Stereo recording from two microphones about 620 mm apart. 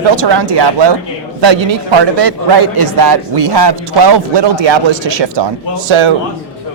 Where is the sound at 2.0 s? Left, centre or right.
Right.